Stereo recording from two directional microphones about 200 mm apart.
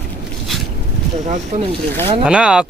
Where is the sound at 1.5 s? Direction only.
35° right (ahead or behind).